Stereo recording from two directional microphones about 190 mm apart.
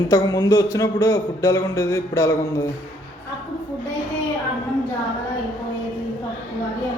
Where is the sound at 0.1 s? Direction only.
20° left (ahead or behind).